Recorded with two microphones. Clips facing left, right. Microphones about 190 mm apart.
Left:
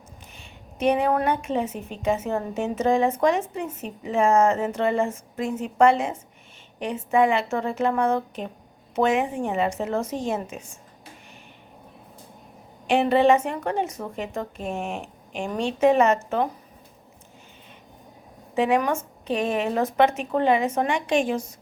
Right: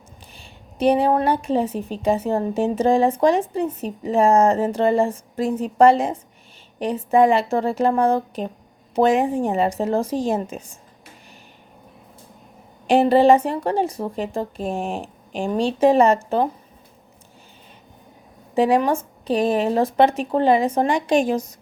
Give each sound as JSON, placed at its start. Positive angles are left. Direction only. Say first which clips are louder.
{"t": 0.3, "sound": "a woman's voice", "louder": "right 5 dB", "side_deg": -35}
{"t": 12.9, "sound": "a woman's voice", "louder": "right 4 dB", "side_deg": -35}
{"t": 18.5, "sound": "a woman's voice", "louder": "right 4 dB", "side_deg": -35}